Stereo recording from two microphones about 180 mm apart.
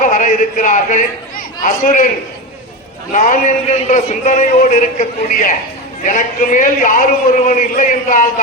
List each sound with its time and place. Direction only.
0.0 s a man's voice: 45° left (ahead or behind)
3.1 s a man's voice: 45° left (ahead or behind)